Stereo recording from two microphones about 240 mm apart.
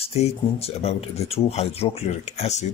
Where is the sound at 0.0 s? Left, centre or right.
Left.